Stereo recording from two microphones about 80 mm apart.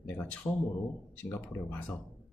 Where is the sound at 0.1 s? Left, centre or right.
Left.